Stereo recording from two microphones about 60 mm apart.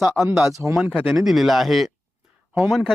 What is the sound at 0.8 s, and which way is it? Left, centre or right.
Speech, right.